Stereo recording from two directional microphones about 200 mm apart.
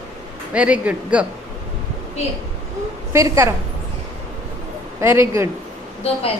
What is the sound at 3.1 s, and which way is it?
Speech, 15° right (ahead or behind).